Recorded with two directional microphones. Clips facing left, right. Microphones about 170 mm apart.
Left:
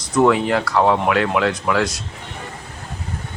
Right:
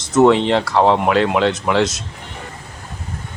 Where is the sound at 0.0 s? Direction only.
25° right (ahead or behind).